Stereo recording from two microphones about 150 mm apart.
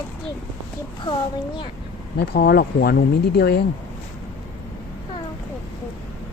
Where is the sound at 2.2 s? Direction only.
90° left.